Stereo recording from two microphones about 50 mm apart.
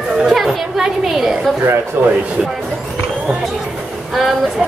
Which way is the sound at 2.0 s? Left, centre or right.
Right.